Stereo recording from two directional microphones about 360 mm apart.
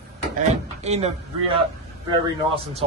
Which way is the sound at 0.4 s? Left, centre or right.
Centre.